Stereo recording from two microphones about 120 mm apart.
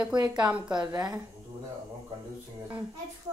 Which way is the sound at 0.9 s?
35° right (ahead or behind).